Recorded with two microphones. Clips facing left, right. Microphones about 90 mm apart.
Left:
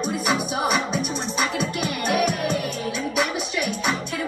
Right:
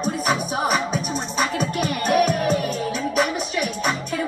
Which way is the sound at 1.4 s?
40° right (ahead or behind).